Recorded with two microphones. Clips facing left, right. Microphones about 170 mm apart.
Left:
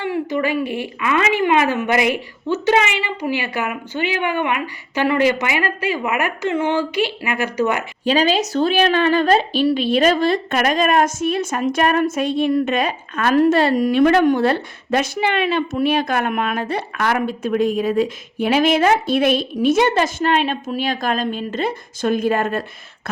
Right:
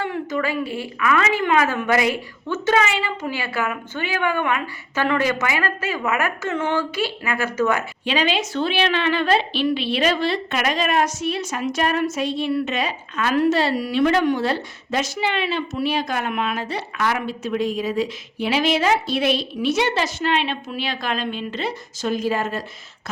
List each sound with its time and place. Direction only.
0.3 s a woman's voice: 20° left (ahead or behind)
8.0 s a woman's voice: 40° left (ahead or behind); by 22.6 s 55° left (ahead or behind)